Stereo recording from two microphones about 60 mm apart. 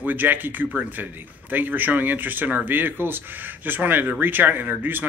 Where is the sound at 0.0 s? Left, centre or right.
Right.